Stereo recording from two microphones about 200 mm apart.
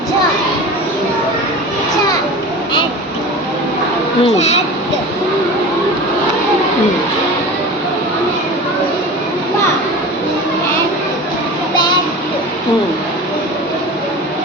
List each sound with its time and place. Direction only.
4.2 s speech: 30° left (ahead or behind)